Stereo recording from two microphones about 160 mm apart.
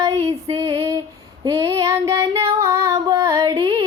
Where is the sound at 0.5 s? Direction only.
20° right (ahead or behind).